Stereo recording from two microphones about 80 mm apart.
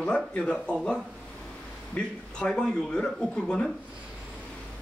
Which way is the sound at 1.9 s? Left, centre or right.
Centre.